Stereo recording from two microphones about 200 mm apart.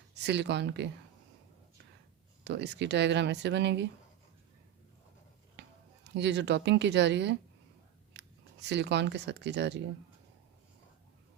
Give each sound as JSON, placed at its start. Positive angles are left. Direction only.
{"t": 0.1, "sound": "speech", "side_deg": -60}
{"t": 2.4, "sound": "speech", "side_deg": -60}
{"t": 5.6, "sound": "a sound", "side_deg": -60}
{"t": 6.1, "sound": "speech", "side_deg": -60}